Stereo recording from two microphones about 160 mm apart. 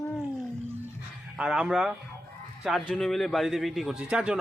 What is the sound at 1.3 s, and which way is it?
A man's voice, 5° right (ahead or behind).